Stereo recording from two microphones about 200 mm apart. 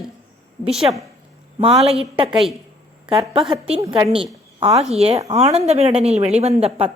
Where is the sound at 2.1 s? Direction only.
25° right (ahead or behind).